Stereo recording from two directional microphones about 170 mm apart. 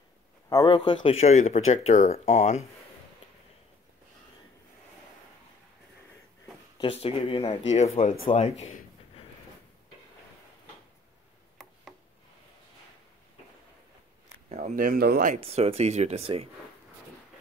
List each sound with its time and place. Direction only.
0.5 s speech: 25° left (ahead or behind); by 2.6 s 45° left (ahead or behind)
6.8 s speech: 35° left (ahead or behind)
14.5 s speech: 45° right (ahead or behind)
15.4 s speech: 35° right (ahead or behind)